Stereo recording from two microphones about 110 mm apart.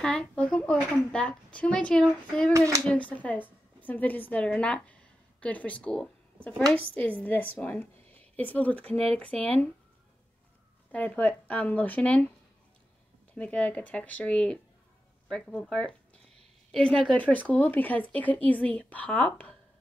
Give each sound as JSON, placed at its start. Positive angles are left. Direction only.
{"t": 0.0, "sound": "a woman's voice", "side_deg": 10}
{"t": 2.5, "sound": "speech", "side_deg": -30}
{"t": 2.9, "sound": "a woman's voice", "side_deg": 15}
{"t": 10.9, "sound": "a woman's voice", "side_deg": 15}
{"t": 13.3, "sound": "a woman's voice", "side_deg": 10}